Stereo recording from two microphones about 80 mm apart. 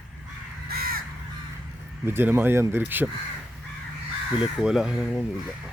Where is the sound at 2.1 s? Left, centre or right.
Right.